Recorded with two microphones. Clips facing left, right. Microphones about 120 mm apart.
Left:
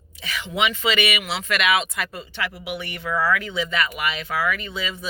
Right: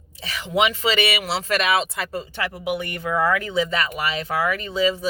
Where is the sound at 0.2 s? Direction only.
35° right (ahead or behind).